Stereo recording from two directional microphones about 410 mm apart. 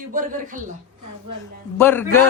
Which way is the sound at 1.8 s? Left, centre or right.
Centre.